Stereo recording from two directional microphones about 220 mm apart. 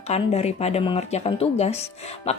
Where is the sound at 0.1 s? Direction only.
30° left (ahead or behind).